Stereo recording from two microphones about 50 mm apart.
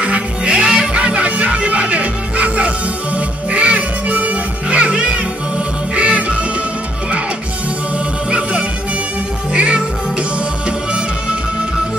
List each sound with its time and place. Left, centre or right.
0.0 s music: right
8.3 s music: right